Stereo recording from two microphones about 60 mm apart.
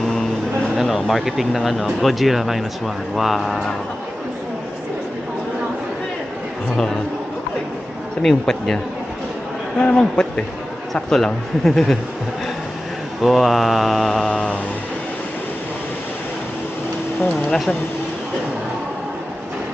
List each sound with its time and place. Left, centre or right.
0.8 s speech: centre
8.2 s speech: centre
13.2 s speech: centre
14.3 s speech: centre